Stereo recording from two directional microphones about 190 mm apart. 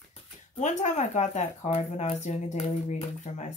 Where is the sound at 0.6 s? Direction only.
40° left (ahead or behind).